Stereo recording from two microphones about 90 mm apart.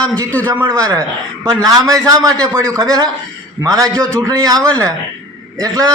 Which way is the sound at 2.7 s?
40° right (ahead or behind).